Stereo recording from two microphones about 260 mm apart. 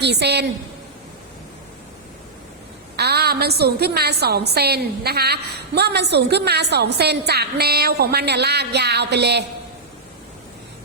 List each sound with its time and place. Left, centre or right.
0.0 s a woman's voice: right
2.9 s a woman's voice: right